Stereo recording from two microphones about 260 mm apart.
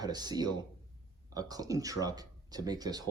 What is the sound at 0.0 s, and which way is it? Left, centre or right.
Speech, centre.